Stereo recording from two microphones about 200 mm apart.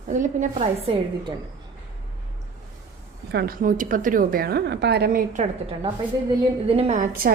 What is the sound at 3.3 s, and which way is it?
A woman's voice, 50° right (ahead or behind).